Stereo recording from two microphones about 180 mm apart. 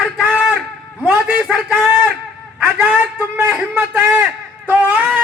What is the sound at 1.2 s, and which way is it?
A man's voice, 5° right (ahead or behind).